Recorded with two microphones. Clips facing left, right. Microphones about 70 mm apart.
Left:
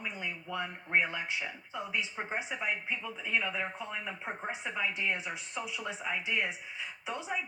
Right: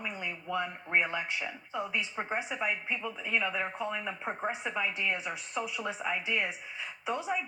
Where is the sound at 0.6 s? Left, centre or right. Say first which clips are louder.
Right 1 dB; centre.